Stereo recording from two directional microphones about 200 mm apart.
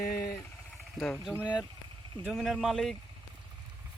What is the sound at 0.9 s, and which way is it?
Speech, 5° left (ahead or behind).